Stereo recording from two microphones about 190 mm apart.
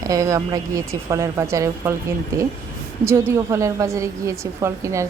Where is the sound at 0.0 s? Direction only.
20° right (ahead or behind).